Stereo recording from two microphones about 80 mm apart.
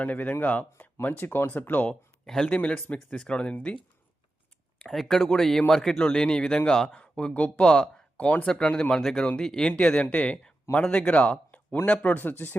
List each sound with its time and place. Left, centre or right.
0.0 s speech: left
1.9 s speech: centre
4.9 s speech: centre; by 12.5 s left